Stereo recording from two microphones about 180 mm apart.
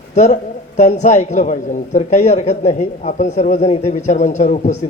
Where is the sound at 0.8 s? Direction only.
40° left (ahead or behind).